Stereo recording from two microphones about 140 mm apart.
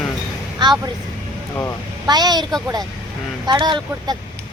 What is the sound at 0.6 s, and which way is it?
Speech, 30° right (ahead or behind).